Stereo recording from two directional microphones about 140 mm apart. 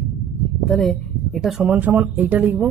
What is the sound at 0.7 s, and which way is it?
A woman's voice, centre (ahead or behind).